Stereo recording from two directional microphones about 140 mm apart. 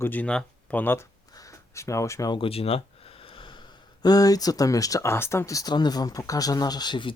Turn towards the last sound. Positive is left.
turn(degrees=35)  # may be behind; listen again after turning